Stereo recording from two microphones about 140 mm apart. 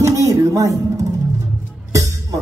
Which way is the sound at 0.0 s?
20° right (ahead or behind).